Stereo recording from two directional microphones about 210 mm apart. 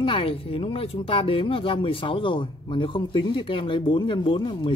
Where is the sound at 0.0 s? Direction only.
25° left (ahead or behind).